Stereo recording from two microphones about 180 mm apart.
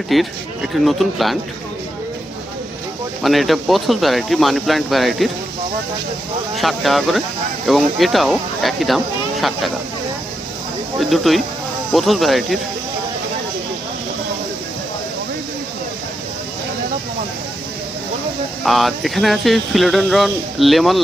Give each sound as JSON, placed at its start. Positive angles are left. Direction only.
{"t": 0.1, "sound": "speech", "side_deg": 0}
{"t": 3.2, "sound": "speech", "side_deg": 0}
{"t": 6.5, "sound": "speech", "side_deg": 0}
{"t": 11.1, "sound": "speech", "side_deg": 0}
{"t": 18.6, "sound": "speech", "side_deg": 0}